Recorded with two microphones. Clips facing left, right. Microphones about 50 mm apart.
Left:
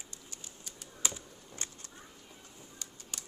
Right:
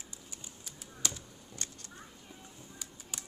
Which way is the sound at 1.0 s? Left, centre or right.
Centre.